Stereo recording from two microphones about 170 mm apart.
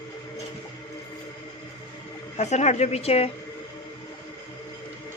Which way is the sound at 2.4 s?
40° left (ahead or behind).